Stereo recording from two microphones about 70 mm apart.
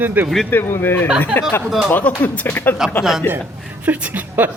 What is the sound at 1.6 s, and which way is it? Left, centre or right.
Speech, centre.